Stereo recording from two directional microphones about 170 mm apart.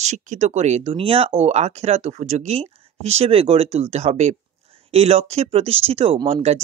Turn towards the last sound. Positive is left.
turn(degrees=-35)  # may be behind; listen again after turning